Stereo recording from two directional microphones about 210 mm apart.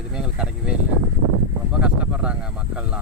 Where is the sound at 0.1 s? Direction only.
5° right (ahead or behind).